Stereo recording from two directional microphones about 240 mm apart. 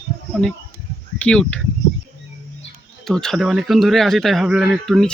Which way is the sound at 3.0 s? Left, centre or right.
Centre.